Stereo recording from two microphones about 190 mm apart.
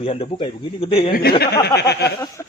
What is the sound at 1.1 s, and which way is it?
Speech, 55° left (ahead or behind).